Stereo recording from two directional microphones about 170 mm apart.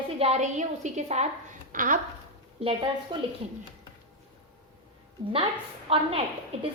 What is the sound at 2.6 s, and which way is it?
Speech, 30° right (ahead or behind).